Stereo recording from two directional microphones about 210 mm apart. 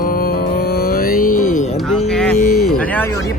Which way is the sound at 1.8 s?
5° left (ahead or behind).